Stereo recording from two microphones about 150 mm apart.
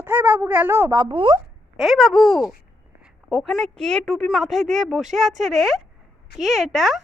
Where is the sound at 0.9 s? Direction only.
30° right (ahead or behind).